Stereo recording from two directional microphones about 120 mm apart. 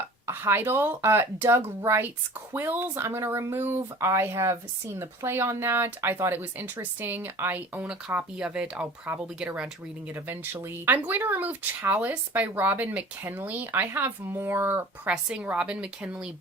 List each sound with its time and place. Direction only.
0.3 s speech: 20° right (ahead or behind)